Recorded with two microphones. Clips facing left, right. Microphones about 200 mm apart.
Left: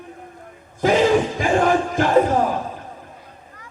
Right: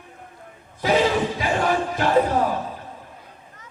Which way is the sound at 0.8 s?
50° left (ahead or behind).